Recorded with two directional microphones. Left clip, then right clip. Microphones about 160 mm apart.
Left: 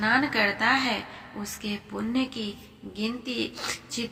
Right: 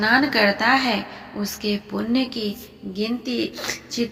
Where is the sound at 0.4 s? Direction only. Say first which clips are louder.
Right 5 dB; 30° right (ahead or behind).